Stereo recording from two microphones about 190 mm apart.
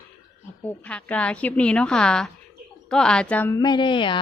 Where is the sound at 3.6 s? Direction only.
25° left (ahead or behind).